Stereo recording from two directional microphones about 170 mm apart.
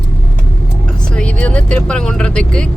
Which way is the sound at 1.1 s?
5° left (ahead or behind).